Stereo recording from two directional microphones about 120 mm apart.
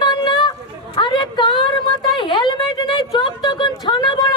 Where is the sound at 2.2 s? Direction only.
40° left (ahead or behind).